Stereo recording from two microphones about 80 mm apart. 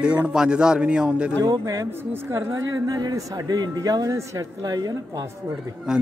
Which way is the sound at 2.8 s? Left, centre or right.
Right.